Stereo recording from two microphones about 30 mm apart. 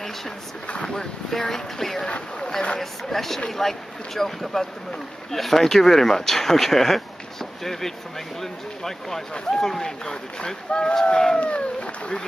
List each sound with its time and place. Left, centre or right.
1.3 s speech: centre
2.0 s speech: left
2.8 s speech: centre; by 11.3 s left
11.3 s speech: left